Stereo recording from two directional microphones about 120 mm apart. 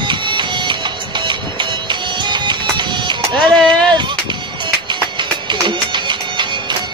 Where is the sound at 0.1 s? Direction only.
40° right (ahead or behind).